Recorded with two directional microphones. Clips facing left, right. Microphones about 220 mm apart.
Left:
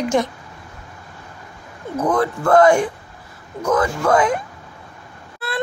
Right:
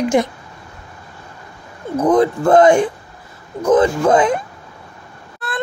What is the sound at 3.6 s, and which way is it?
Speech, 20° right (ahead or behind).